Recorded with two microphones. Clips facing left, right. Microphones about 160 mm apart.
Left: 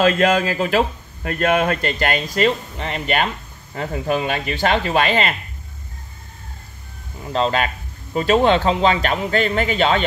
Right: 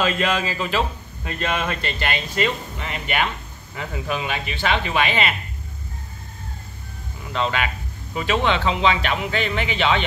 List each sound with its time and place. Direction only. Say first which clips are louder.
0.0 s a man's voice: left 6 dB; 45° left (ahead or behind)
7.2 s speech: left 4 dB; 35° left (ahead or behind)